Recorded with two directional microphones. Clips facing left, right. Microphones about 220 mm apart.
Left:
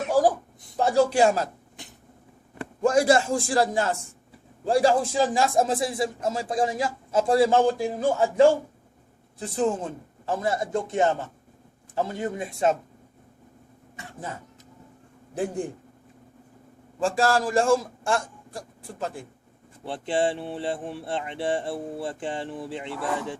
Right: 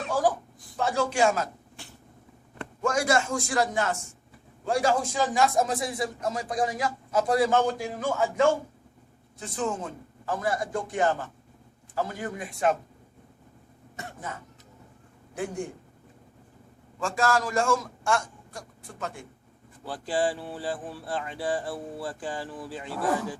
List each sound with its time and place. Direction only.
0.8 s a man's voice: 35° left (ahead or behind)
1.7 s vehicle: 20° left (ahead or behind)
2.8 s a man's voice: 35° left (ahead or behind)
17.0 s a man's voice: 30° left (ahead or behind)